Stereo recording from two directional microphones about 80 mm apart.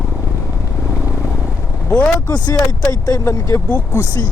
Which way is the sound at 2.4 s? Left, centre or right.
Left.